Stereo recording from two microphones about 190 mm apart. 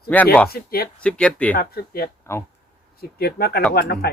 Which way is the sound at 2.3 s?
15° left (ahead or behind).